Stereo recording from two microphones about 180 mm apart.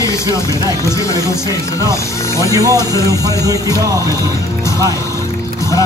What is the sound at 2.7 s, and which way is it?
Speech, 15° left (ahead or behind).